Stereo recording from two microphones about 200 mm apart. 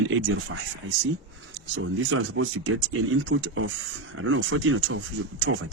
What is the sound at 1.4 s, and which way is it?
Speech, 75° right (ahead or behind).